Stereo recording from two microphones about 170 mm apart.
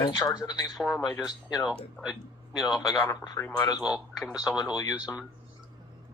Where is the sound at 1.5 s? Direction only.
Centre (ahead or behind).